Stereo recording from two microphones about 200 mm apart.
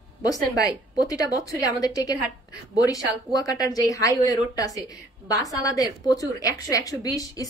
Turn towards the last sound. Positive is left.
turn(degrees=20)  # may be behind; listen again after turning